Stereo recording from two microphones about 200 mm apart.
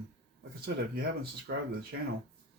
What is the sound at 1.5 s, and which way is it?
Speech, 50° right (ahead or behind).